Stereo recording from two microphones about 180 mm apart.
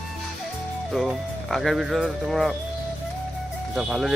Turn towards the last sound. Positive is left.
turn(degrees=-5)  # may be behind; listen again after turning